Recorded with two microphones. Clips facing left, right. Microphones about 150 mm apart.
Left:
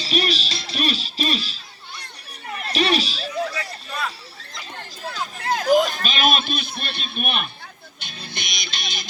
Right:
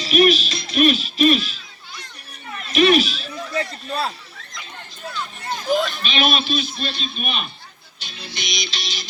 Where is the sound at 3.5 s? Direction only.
30° right (ahead or behind).